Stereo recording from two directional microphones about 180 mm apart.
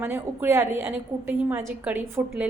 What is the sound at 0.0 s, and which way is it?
A woman's voice, 15° right (ahead or behind).